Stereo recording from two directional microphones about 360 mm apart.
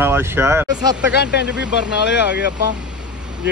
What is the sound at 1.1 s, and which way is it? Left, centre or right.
Speech, left.